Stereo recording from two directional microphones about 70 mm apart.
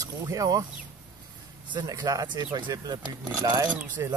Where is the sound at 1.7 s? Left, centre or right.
Right.